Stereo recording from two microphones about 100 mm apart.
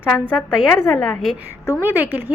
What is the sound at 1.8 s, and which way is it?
Speech, 20° right (ahead or behind).